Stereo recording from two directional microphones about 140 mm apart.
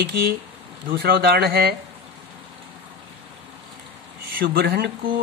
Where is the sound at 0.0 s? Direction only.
90° right.